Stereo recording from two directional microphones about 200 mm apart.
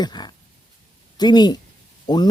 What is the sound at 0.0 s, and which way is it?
Speech, 20° left (ahead or behind).